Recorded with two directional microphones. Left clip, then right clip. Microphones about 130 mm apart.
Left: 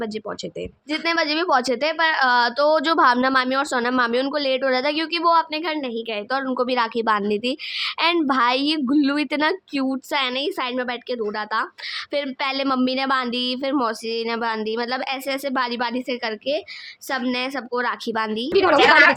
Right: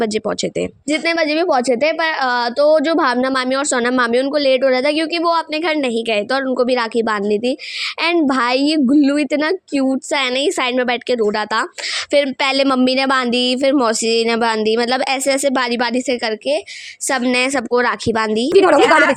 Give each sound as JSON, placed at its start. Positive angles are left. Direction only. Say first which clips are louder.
{"t": 0.0, "sound": "speech", "louder": "right 10 dB", "side_deg": -55}
{"t": 0.9, "sound": "a woman's voice", "louder": "right 4 dB", "side_deg": -40}
{"t": 5.6, "sound": "a woman's voice", "louder": "right 8 dB", "side_deg": -75}
{"t": 6.5, "sound": "a woman's voice", "louder": "right 3 dB", "side_deg": -30}
{"t": 10.2, "sound": "speech", "louder": "right 5 dB", "side_deg": -60}
{"t": 17.3, "sound": "speech", "louder": "right 9 dB", "side_deg": -70}
{"t": 18.5, "sound": "a woman's voice", "louder": "right 6 dB", "side_deg": -90}
{"t": 18.8, "sound": "a woman's voice", "louder": "right 2 dB", "side_deg": -30}